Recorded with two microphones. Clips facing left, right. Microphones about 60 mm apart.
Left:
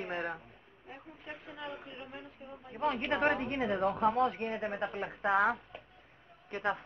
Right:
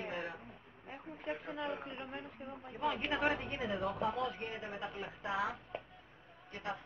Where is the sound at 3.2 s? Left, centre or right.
Left.